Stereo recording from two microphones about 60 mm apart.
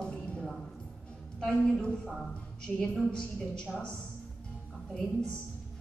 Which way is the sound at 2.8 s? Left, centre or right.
Centre.